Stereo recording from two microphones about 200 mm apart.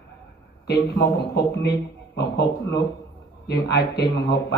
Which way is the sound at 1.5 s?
55° left (ahead or behind).